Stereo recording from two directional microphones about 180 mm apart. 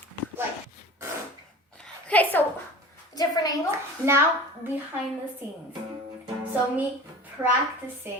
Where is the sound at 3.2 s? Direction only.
20° left (ahead or behind).